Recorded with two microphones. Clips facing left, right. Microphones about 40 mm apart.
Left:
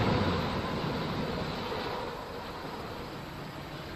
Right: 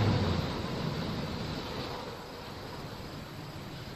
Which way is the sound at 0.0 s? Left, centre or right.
Left.